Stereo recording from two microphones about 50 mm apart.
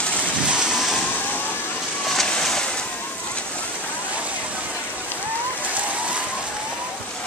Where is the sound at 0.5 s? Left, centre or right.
Centre.